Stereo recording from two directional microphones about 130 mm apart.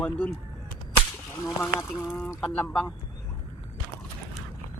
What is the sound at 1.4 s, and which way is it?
Speech, 25° left (ahead or behind).